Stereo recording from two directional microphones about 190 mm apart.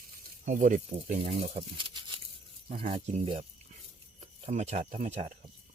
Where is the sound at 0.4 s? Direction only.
45° right (ahead or behind).